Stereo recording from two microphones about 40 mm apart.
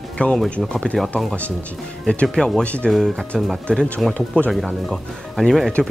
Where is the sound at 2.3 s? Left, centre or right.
Centre.